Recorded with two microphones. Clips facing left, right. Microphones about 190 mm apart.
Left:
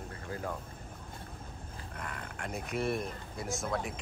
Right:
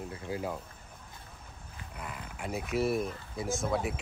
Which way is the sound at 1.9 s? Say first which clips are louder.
Right 1 dB; 5° right (ahead or behind).